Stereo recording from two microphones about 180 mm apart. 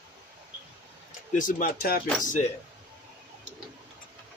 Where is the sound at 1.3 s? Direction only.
45° left (ahead or behind).